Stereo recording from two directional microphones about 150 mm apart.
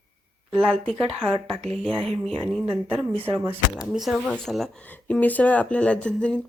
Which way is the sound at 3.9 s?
Centre (ahead or behind).